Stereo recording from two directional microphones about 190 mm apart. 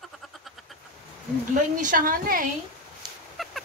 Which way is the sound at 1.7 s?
45° right (ahead or behind).